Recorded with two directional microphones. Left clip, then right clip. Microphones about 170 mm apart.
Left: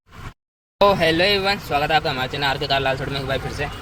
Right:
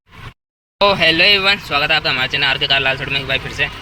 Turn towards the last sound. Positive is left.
turn(degrees=20)  # may be behind; listen again after turning